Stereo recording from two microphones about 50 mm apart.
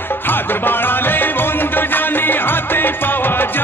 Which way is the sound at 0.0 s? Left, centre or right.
Left.